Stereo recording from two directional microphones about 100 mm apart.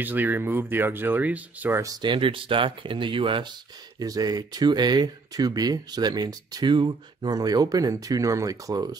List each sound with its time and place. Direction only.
0.0 s speech: 20° right (ahead or behind)
1.8 s speech: 35° right (ahead or behind)
2.0 s speech: 60° right (ahead or behind)
4.0 s speech: 40° right (ahead or behind)